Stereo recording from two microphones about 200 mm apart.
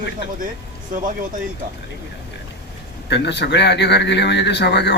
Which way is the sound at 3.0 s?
60° left (ahead or behind).